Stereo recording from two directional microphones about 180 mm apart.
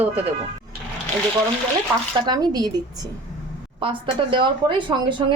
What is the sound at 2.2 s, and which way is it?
A woman's voice, 20° right (ahead or behind).